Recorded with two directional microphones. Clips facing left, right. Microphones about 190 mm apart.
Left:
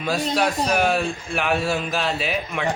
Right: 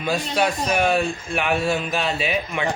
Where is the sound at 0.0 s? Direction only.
Centre (ahead or behind).